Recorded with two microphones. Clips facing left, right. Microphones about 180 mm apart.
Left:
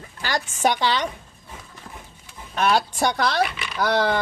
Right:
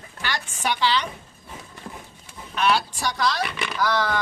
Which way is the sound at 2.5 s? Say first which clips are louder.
Left 2 dB; 50° left (ahead or behind).